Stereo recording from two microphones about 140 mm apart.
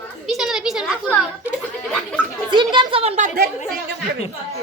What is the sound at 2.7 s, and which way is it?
Speech, 35° right (ahead or behind).